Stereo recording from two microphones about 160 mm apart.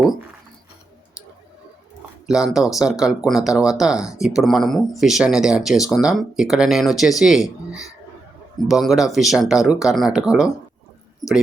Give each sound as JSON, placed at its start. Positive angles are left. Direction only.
{"t": 2.2, "sound": "speech", "side_deg": -5}